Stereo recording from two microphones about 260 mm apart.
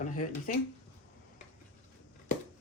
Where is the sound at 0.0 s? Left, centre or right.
Left.